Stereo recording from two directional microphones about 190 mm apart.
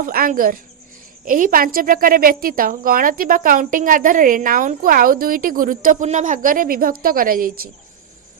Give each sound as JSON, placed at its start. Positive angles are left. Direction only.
{"t": 0.0, "sound": "a woman's voice", "side_deg": -50}